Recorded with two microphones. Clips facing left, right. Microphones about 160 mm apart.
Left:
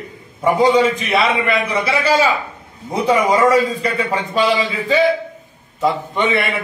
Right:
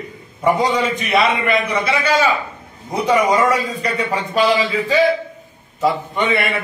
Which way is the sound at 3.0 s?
Centre (ahead or behind).